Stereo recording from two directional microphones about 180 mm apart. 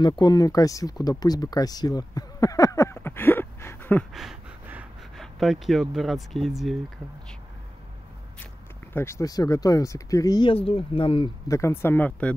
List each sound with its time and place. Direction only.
0.0 s speech: 25° left (ahead or behind)
4.1 s a sound: centre (ahead or behind)
5.2 s speech: centre (ahead or behind)
8.9 s speech: 15° left (ahead or behind); by 11.2 s 30° left (ahead or behind)
11.4 s speech: 15° left (ahead or behind)